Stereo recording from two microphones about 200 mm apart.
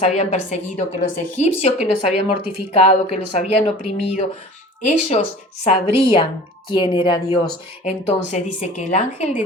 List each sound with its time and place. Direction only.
0.1 s a woman's voice: 35° left (ahead or behind)